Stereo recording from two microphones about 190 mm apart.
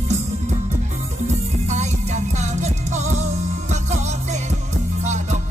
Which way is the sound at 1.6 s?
35° right (ahead or behind).